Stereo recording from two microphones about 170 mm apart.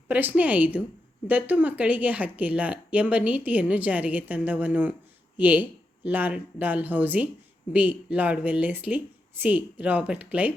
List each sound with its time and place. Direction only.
0.1 s speech: 10° right (ahead or behind)